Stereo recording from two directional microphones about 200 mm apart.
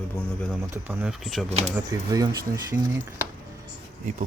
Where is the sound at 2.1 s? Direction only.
20° right (ahead or behind).